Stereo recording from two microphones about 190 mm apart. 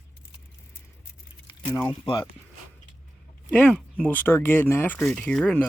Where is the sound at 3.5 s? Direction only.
5° left (ahead or behind).